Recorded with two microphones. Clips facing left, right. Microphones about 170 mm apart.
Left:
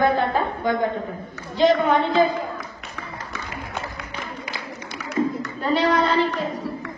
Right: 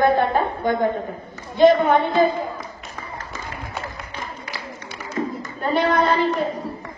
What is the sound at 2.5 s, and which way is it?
Music, 70° left (ahead or behind).